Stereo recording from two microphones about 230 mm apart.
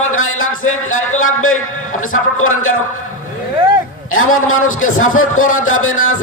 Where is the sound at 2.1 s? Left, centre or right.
Left.